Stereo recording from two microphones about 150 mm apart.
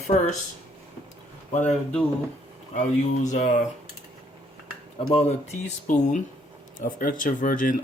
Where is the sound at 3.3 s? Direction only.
55° left (ahead or behind).